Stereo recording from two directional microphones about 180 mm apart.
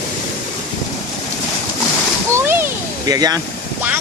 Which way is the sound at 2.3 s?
15° right (ahead or behind).